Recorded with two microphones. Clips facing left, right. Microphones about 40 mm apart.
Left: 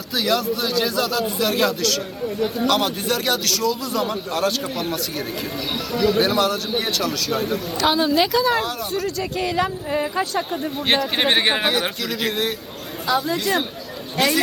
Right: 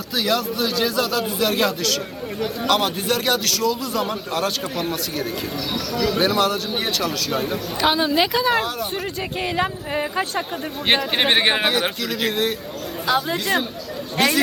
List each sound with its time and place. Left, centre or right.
0.1 s speech: centre
7.8 s speech: centre
8.5 s speech: centre
8.9 s speech: right; by 12.5 s centre
13.1 s speech: right